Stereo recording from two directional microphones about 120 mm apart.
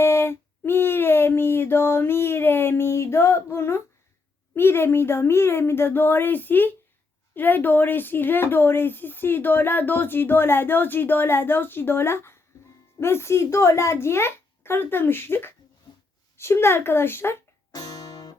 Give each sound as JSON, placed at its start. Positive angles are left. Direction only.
{"t": 0.0, "sound": "a sound", "side_deg": 20}
{"t": 4.5, "sound": "a child's voice", "side_deg": 20}
{"t": 17.7, "sound": "music", "side_deg": 35}